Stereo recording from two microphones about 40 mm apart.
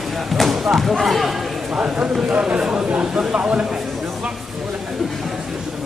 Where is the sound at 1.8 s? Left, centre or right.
Right.